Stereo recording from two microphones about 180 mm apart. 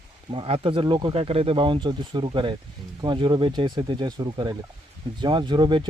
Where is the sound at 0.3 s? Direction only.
30° right (ahead or behind).